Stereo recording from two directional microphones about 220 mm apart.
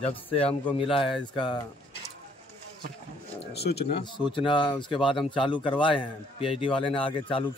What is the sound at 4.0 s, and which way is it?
Speech, 20° left (ahead or behind).